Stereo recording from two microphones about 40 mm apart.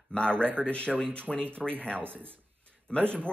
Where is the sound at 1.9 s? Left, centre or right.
Right.